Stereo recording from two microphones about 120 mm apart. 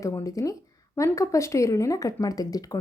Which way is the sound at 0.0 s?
25° left (ahead or behind).